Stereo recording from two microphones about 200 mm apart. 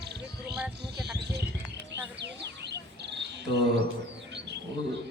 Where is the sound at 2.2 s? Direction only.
60° right (ahead or behind).